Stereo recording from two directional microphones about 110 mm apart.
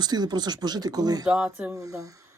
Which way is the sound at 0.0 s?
40° right (ahead or behind).